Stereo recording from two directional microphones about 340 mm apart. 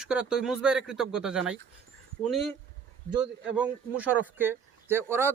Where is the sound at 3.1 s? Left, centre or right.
Centre.